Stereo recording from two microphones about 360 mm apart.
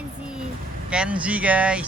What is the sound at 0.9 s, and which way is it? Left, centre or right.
Speech, centre.